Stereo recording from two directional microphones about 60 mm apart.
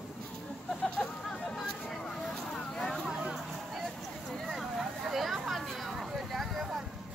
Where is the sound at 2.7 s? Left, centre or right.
Centre.